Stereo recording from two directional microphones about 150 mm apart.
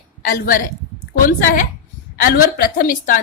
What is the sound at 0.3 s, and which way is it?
A woman's voice, 70° left (ahead or behind).